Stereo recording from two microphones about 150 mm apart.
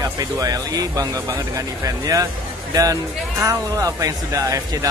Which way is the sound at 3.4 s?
20° right (ahead or behind).